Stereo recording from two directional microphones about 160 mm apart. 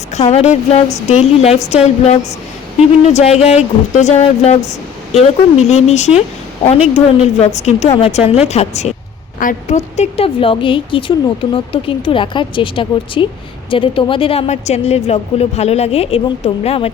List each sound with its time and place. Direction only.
0.1 s a woman's voice: 45° left (ahead or behind)